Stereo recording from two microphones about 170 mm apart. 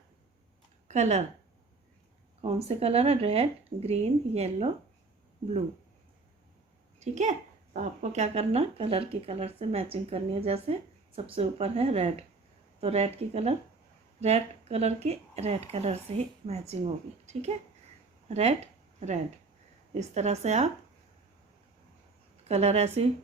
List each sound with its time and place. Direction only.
0.9 s speech: 40° right (ahead or behind)
2.4 s speech: 35° right (ahead or behind)
7.0 s speech: 45° right (ahead or behind)
22.4 s speech: 40° right (ahead or behind)